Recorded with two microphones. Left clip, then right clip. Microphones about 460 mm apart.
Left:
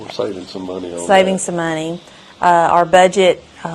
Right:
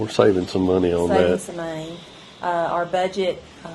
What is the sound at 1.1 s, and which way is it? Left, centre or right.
A woman's voice, left.